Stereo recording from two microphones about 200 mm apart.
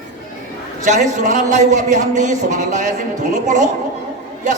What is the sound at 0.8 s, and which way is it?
A man's voice, 35° right (ahead or behind).